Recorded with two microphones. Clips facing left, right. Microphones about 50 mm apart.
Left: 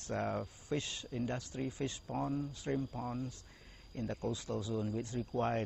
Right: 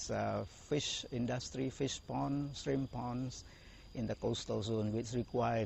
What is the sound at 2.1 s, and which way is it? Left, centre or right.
Speech, centre.